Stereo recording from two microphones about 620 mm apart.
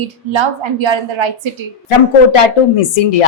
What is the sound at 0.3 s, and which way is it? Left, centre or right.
Speech, right.